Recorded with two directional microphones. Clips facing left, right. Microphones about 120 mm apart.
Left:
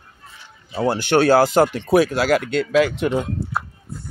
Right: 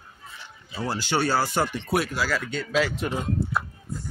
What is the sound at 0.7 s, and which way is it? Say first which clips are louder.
Speech: left 9 dB; 60° left (ahead or behind).